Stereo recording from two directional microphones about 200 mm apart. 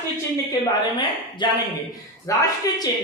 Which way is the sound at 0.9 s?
20° left (ahead or behind).